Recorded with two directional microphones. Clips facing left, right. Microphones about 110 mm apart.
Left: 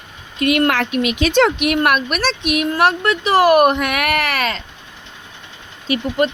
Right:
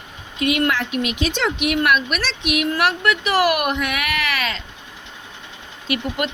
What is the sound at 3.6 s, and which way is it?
Speech, 50° left (ahead or behind).